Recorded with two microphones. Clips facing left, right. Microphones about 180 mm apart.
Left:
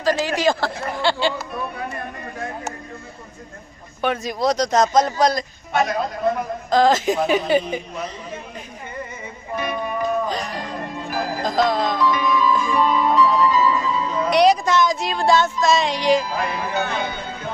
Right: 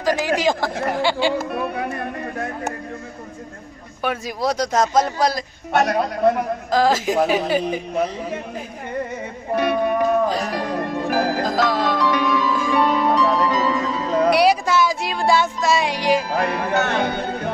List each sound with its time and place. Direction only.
0.0 s speech: 15° right (ahead or behind)
0.7 s a sound: 65° right (ahead or behind)
1.5 s music: 60° right (ahead or behind)
4.0 s speech: 5° right (ahead or behind)
5.7 s a woman's voice: 65° right (ahead or behind)
6.7 s speech: 5° right (ahead or behind)
7.9 s a woman's voice: 55° right (ahead or behind)
9.6 s music: 70° right (ahead or behind)
14.3 s speech: 10° right (ahead or behind)
16.3 s speech: 60° right (ahead or behind)